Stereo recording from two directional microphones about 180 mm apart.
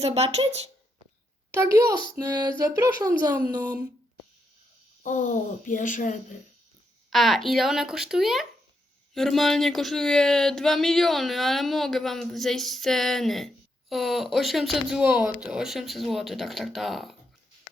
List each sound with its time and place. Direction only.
0.0 s speech: 35° right (ahead or behind)
1.5 s speech: 15° right (ahead or behind)
5.0 s speech: 45° left (ahead or behind)
7.1 s speech: centre (ahead or behind)